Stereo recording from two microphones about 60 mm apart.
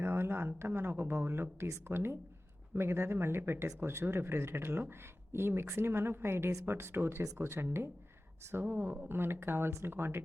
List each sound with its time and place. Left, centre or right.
0.0 s speech: right